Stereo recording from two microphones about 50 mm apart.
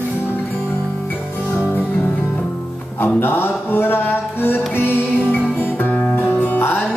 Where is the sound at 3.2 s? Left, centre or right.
Left.